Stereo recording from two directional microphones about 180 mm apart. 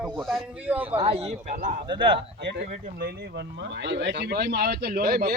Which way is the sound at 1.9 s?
30° right (ahead or behind).